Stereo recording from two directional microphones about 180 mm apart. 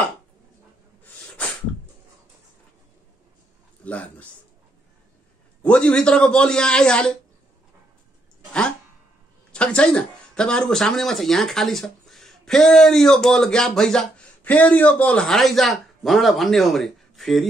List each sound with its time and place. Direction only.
3.8 s a man's voice: 10° left (ahead or behind)
5.6 s speech: 5° left (ahead or behind)
9.5 s speech: 5° left (ahead or behind)